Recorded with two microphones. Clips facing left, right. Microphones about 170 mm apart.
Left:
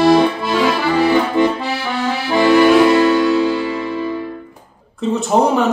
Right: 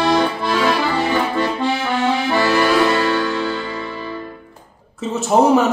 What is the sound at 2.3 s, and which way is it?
Music, 15° left (ahead or behind).